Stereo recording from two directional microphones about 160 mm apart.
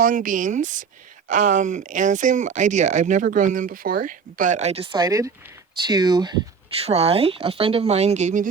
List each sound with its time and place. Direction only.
0.0 s speech: 55° right (ahead or behind); by 6.3 s 25° right (ahead or behind)
6.7 s speech: 40° right (ahead or behind)